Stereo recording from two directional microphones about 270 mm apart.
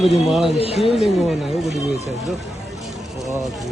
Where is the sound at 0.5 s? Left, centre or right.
Left.